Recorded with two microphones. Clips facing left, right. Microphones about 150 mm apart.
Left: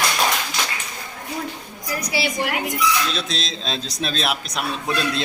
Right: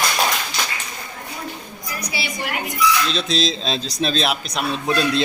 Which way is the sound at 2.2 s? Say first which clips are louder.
Left 7 dB; 90° left.